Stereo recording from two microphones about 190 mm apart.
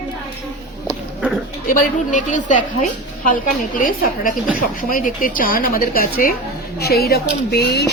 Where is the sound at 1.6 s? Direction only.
45° left (ahead or behind).